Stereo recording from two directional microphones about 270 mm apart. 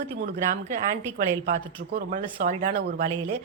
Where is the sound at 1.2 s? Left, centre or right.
Right.